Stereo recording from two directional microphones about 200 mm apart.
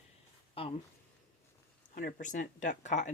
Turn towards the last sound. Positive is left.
turn(degrees=35)  # may be behind; listen again after turning